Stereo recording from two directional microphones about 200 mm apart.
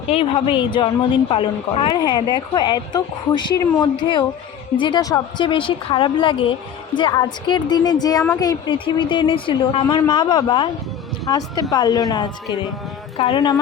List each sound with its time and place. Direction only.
0.1 s a woman's voice: 30° left (ahead or behind)